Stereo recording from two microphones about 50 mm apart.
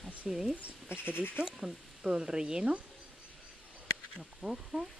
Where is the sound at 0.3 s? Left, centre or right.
Centre.